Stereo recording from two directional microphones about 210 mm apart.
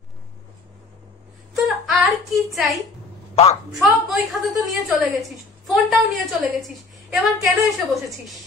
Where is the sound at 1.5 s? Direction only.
Centre (ahead or behind).